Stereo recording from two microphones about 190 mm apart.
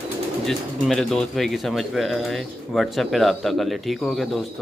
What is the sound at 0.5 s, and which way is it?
Speech, centre (ahead or behind).